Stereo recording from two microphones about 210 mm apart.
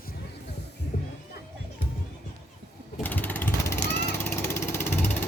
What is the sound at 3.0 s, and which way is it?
Vehicle, 10° left (ahead or behind).